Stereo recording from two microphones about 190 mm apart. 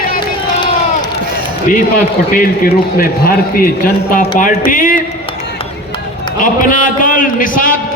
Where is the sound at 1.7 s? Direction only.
45° left (ahead or behind).